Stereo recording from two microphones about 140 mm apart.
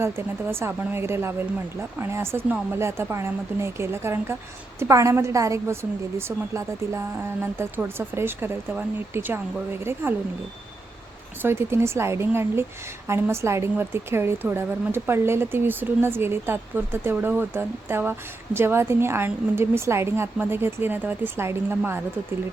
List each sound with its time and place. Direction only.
0.0 s a woman's voice: 20° right (ahead or behind)
11.4 s a woman's voice: 20° right (ahead or behind)